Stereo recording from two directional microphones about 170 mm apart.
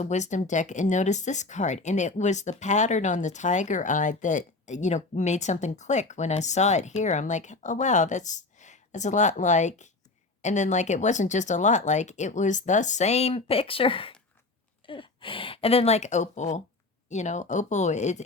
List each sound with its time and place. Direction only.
0.0 s speech: 45° left (ahead or behind)